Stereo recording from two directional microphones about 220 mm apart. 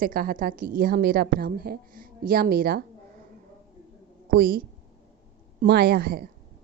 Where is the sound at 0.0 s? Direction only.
40° right (ahead or behind).